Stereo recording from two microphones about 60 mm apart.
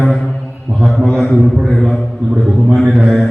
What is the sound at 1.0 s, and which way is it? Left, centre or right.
Speech, left.